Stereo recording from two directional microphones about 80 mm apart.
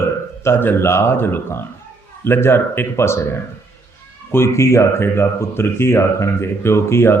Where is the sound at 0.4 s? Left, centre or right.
Left.